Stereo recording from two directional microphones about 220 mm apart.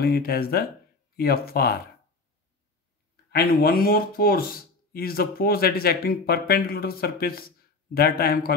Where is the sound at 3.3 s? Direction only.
45° left (ahead or behind).